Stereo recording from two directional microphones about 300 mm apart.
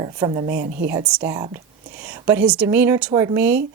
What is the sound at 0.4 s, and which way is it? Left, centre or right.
Speech, right.